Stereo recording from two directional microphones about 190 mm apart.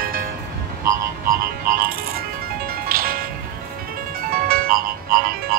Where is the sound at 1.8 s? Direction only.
50° right (ahead or behind).